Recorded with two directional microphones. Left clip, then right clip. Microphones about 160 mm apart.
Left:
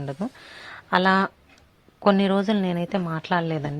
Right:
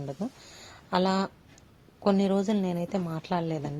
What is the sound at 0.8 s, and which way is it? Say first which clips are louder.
A woman's voice: left 7 dB; 10° left (ahead or behind).